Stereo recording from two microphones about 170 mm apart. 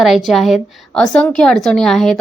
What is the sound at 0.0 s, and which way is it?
A woman's voice, centre (ahead or behind).